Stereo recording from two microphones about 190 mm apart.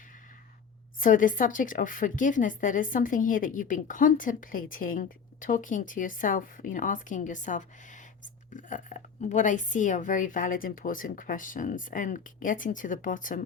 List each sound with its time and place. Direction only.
0.9 s a woman's voice: 45° left (ahead or behind)